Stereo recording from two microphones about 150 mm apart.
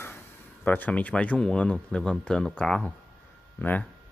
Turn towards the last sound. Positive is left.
turn(degrees=10)  # may be behind; listen again after turning